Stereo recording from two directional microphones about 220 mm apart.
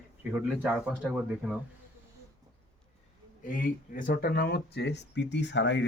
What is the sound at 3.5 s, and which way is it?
Speech, 40° left (ahead or behind).